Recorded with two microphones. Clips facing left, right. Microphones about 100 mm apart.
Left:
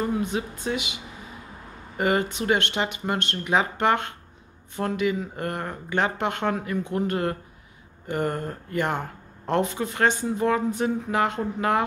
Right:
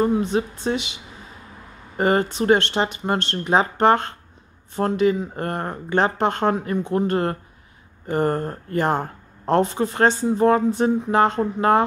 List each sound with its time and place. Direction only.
0.0 s speech: 30° right (ahead or behind)
2.0 s speech: 35° right (ahead or behind)